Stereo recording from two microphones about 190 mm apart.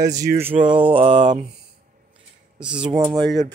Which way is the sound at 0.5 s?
35° right (ahead or behind).